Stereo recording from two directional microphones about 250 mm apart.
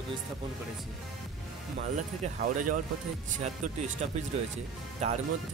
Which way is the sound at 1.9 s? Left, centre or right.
Right.